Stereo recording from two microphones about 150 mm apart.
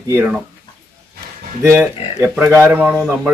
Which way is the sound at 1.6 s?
20° right (ahead or behind).